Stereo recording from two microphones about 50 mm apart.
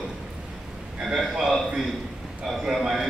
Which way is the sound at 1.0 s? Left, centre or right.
Centre.